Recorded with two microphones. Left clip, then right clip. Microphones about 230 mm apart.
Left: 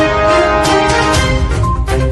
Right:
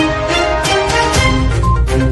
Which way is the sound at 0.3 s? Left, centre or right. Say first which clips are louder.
Left 4 dB; centre.